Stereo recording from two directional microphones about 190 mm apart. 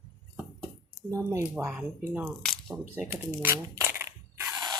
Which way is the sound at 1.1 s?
15° right (ahead or behind).